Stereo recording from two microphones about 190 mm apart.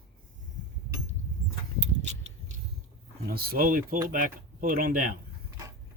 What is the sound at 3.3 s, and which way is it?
Speech, 50° right (ahead or behind).